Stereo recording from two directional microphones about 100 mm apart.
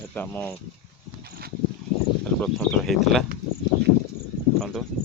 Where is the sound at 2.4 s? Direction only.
5° left (ahead or behind).